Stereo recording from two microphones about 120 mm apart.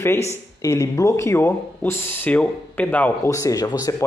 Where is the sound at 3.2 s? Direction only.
25° left (ahead or behind).